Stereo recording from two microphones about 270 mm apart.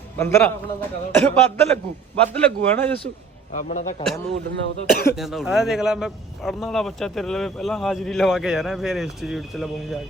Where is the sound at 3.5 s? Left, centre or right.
Left.